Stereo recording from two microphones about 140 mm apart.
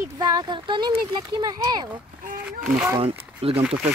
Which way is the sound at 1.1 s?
30° right (ahead or behind).